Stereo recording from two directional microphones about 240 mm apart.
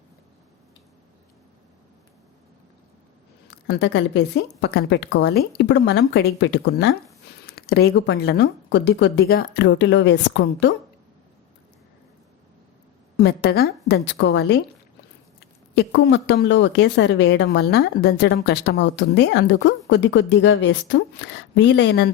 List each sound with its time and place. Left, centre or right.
3.7 s speech: left
13.1 s speech: left
15.7 s speech: left